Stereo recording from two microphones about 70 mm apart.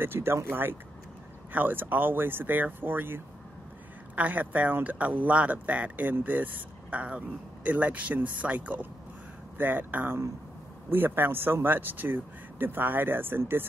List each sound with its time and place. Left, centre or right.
0.0 s speech: right